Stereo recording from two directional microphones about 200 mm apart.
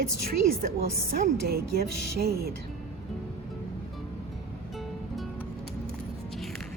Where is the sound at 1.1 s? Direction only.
50° right (ahead or behind).